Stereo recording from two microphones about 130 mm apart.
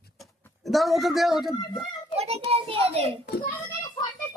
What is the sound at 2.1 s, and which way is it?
Speech, 50° right (ahead or behind).